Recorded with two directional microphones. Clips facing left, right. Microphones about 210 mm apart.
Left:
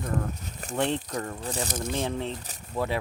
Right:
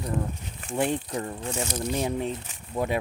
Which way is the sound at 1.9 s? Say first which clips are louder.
Right 4 dB; 15° right (ahead or behind).